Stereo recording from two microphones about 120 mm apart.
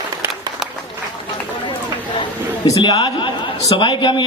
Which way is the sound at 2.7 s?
30° left (ahead or behind).